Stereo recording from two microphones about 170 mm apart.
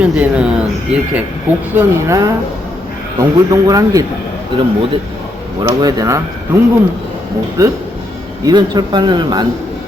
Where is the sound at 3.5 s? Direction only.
20° right (ahead or behind).